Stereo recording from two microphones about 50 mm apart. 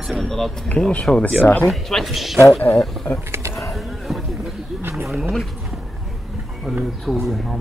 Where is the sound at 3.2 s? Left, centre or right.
Right.